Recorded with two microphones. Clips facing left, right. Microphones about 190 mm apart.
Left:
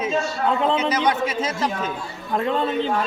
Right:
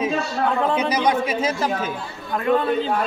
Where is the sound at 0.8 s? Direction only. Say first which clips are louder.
Right 1 dB; 10° right (ahead or behind).